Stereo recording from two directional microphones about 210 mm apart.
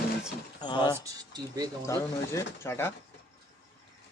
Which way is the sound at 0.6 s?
20° left (ahead or behind).